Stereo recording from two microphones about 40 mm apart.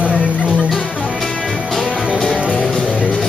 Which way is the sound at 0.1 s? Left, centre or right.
Centre.